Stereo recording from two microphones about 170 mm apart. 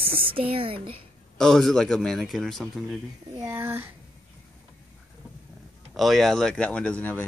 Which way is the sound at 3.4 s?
15° right (ahead or behind).